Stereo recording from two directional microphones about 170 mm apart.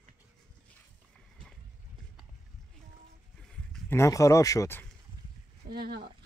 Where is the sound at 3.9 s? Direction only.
20° left (ahead or behind).